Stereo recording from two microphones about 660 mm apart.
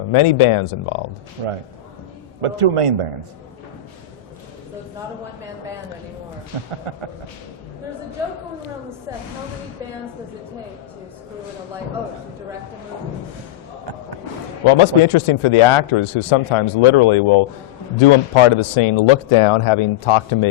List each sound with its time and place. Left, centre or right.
0.1 s speech: left
1.4 s a man's voice: right
6.9 s a man's voice: right
14.7 s speech: left